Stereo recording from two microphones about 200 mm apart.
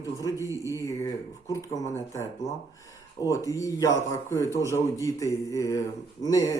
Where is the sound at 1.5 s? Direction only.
15° left (ahead or behind).